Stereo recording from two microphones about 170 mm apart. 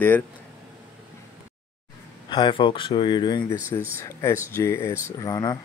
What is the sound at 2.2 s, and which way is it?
Speech, 25° left (ahead or behind).